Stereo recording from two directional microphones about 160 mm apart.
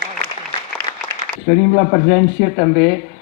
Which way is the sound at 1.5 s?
60° left (ahead or behind).